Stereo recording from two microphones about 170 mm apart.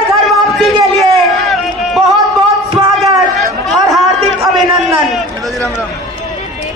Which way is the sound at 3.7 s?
20° right (ahead or behind).